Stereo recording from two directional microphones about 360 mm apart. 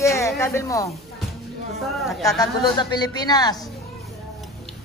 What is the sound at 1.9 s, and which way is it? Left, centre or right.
Speech, centre.